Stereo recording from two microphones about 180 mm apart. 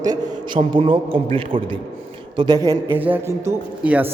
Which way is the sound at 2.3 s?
20° right (ahead or behind).